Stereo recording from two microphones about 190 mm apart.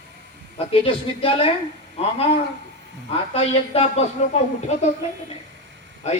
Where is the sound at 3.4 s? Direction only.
30° left (ahead or behind).